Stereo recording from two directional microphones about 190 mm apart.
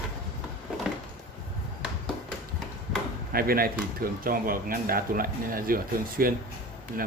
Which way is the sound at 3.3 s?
50° right (ahead or behind).